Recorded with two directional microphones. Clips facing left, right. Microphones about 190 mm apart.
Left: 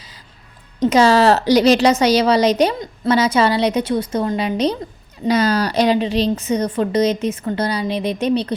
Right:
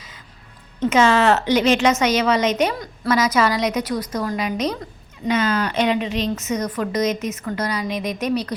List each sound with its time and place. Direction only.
0.8 s a woman's voice: 35° left (ahead or behind)